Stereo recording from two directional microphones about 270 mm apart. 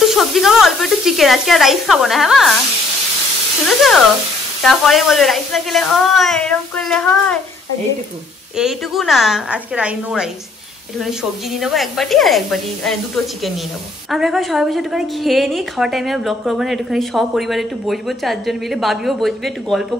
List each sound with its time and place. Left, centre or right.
0.0 s a woman's voice: centre
3.6 s a woman's voice: centre
8.5 s a woman's voice: centre
11.6 s a woman's voice: centre